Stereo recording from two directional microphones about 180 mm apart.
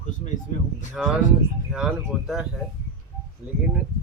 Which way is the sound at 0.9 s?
5° right (ahead or behind).